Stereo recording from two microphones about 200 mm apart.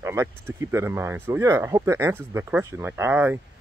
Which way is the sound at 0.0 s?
15° right (ahead or behind).